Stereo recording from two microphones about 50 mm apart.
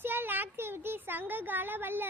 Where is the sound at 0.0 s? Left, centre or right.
Right.